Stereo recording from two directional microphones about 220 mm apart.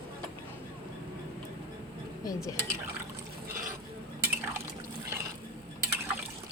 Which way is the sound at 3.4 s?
40° right (ahead or behind).